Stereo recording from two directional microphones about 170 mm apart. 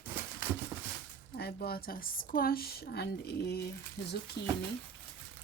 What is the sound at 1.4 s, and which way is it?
A woman's voice, 65° left (ahead or behind).